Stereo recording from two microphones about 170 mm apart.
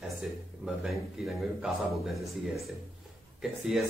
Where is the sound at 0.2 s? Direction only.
Centre (ahead or behind).